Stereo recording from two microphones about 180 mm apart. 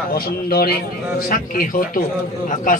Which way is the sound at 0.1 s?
60° left (ahead or behind).